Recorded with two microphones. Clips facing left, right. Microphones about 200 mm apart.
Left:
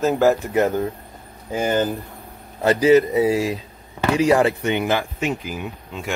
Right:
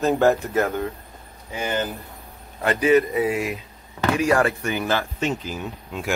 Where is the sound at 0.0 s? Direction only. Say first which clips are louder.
Left 1 dB; centre (ahead or behind).